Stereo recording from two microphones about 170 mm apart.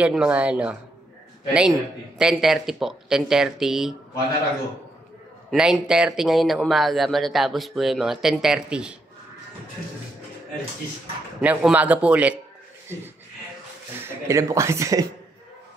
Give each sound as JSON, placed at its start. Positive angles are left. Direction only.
{"t": 0.0, "sound": "speech", "side_deg": -5}
{"t": 5.5, "sound": "speech", "side_deg": -5}
{"t": 11.4, "sound": "speech", "side_deg": -10}
{"t": 14.0, "sound": "speech", "side_deg": -15}